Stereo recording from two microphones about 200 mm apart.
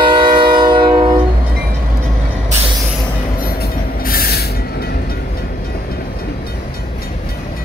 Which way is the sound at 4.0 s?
50° left (ahead or behind).